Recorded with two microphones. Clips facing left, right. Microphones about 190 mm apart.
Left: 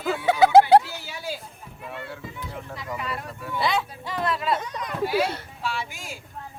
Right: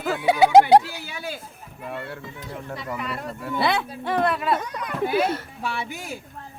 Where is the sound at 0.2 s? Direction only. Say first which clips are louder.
Right 1 dB; 15° right (ahead or behind).